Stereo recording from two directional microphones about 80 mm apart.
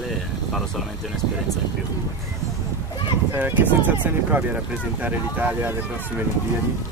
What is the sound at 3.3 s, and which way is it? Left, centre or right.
Speech, right.